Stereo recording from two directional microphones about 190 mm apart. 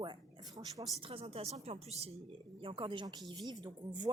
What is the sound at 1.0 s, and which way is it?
Speech, 30° right (ahead or behind).